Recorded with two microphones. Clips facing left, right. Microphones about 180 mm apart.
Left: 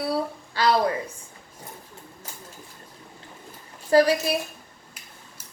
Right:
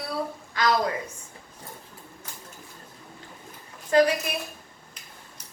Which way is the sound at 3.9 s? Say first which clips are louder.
Left 2 dB; 30° left (ahead or behind).